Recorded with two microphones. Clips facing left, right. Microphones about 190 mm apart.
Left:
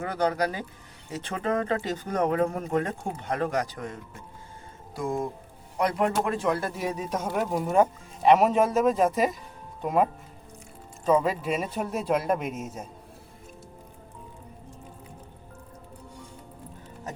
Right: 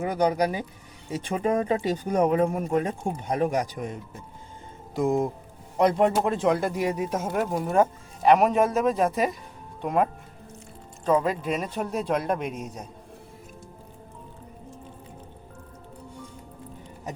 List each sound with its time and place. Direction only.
0.0 s speech: 15° right (ahead or behind); by 12.9 s 5° left (ahead or behind)